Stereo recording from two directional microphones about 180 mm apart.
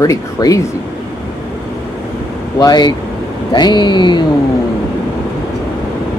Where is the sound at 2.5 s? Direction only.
20° left (ahead or behind).